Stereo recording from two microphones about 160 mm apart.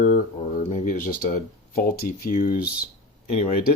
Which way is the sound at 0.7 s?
55° left (ahead or behind).